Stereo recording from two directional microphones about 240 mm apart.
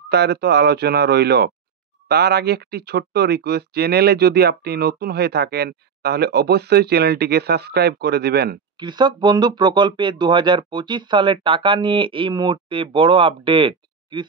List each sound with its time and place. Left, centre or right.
0.1 s speech: right
8.7 s speech: centre